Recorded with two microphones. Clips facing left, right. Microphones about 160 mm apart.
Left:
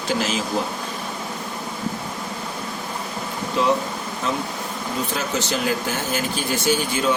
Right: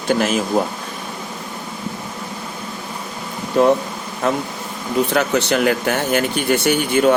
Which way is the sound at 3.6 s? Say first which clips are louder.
Right 6 dB; 50° right (ahead or behind).